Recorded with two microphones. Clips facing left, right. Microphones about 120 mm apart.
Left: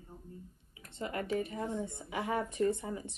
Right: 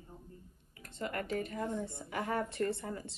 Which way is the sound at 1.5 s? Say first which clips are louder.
Even; 15° left (ahead or behind).